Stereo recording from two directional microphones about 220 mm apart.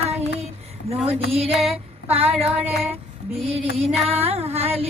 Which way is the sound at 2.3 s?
5° right (ahead or behind).